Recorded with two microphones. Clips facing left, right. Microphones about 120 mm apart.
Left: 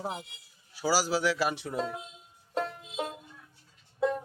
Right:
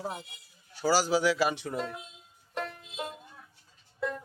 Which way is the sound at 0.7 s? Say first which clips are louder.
Right 2 dB; 5° left (ahead or behind).